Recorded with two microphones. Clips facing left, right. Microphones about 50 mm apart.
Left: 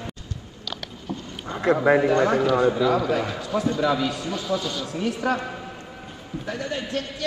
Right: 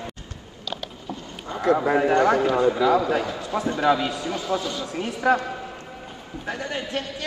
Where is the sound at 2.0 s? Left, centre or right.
Right.